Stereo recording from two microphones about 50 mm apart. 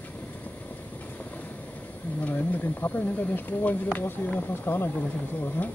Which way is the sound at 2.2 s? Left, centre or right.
Left.